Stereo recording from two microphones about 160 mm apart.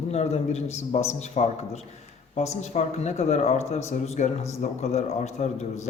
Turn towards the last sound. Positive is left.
turn(degrees=45)  # may be behind; listen again after turning